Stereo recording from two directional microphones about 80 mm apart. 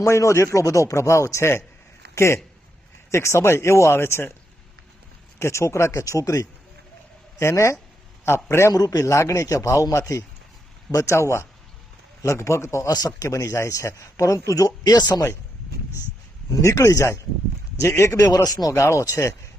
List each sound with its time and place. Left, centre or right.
0.0 s speech: left
5.4 s speech: left
8.7 s speech: left
12.9 s speech: left
13.2 s speech: left
16.6 s speech: left